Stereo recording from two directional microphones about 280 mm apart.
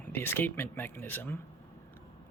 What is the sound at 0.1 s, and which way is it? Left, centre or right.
Speech, centre.